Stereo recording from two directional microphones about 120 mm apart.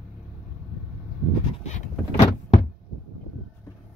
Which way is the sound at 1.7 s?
85° left.